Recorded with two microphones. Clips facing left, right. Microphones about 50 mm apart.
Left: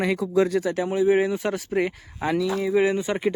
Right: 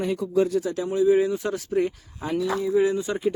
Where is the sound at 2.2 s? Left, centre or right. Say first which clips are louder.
Left 2 dB; left.